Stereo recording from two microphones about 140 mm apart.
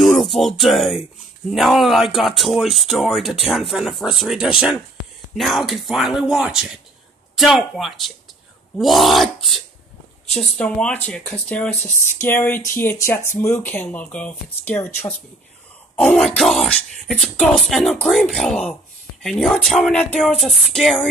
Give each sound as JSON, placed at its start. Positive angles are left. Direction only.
{"t": 0.0, "sound": "music", "side_deg": 0}
{"t": 1.5, "sound": "speech", "side_deg": 0}
{"t": 16.0, "sound": "speech", "side_deg": 5}